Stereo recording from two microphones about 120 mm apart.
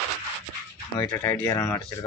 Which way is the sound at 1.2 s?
20° left (ahead or behind).